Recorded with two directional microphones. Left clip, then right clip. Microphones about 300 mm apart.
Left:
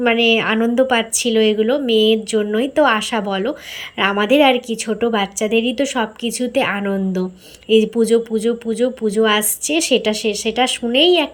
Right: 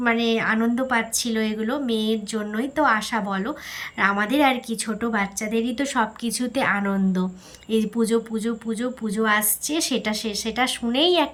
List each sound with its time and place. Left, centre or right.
0.0 s speech: centre